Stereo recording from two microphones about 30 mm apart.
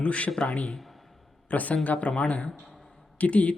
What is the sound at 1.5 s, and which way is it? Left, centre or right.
A man's voice, left.